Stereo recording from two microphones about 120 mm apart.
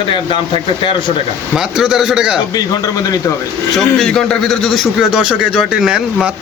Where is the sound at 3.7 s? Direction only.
5° left (ahead or behind).